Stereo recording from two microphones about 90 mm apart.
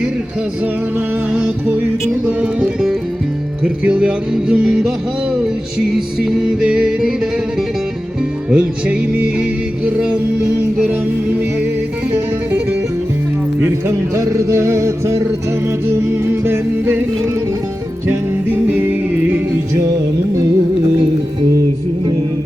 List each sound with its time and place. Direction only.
0.6 s music: 15° right (ahead or behind)
5.9 s music: 5° right (ahead or behind)
8.4 s music: 15° right (ahead or behind)
12.1 s music: 20° right (ahead or behind)
13.8 s music: 35° right (ahead or behind)
18.7 s music: 20° right (ahead or behind)
19.7 s music: 35° right (ahead or behind)